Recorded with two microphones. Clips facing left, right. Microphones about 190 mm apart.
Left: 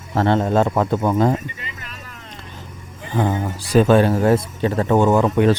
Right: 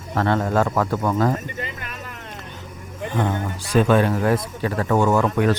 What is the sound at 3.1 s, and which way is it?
Speech, 35° left (ahead or behind).